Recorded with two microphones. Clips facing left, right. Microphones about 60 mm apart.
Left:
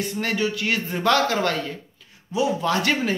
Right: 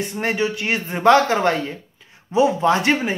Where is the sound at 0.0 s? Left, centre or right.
Right.